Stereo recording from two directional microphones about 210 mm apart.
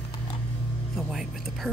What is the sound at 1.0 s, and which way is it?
Speech, centre (ahead or behind).